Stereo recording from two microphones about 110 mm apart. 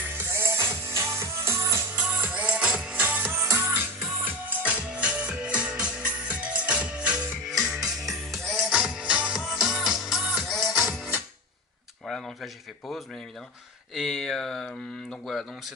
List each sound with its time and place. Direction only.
0.0 s music: 20° right (ahead or behind)
2.0 s music: 15° right (ahead or behind); by 10.9 s centre (ahead or behind)
10.9 s music: 15° right (ahead or behind)
13.9 s speech: centre (ahead or behind)